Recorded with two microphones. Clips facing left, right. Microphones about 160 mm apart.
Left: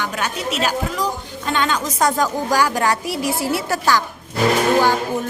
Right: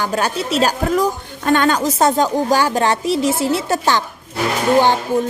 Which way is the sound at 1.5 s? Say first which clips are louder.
Right 6 dB; 45° right (ahead or behind).